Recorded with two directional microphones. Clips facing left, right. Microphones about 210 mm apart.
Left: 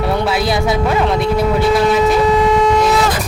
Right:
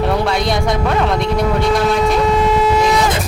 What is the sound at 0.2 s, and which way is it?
Speech, 5° left (ahead or behind).